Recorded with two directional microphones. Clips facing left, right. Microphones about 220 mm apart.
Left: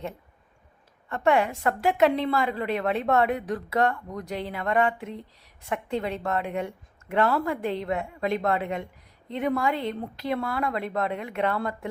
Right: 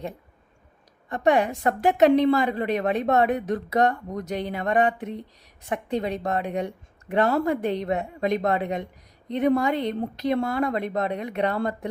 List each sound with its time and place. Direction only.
1.1 s a woman's voice: 15° right (ahead or behind)